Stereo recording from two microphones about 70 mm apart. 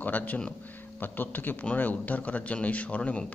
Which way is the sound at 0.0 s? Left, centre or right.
Left.